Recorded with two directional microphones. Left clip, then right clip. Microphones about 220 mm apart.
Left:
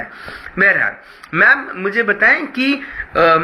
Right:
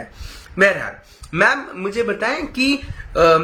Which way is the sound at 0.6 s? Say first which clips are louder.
Left 3 dB; 5° right (ahead or behind).